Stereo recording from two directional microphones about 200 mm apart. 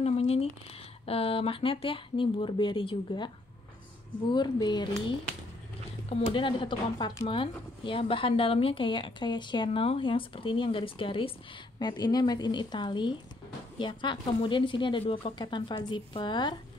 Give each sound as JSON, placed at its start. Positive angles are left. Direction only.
{"t": 0.0, "sound": "a sound", "side_deg": 30}
{"t": 1.0, "sound": "speech", "side_deg": 30}
{"t": 4.3, "sound": "speech", "side_deg": 20}
{"t": 6.0, "sound": "speech", "side_deg": 25}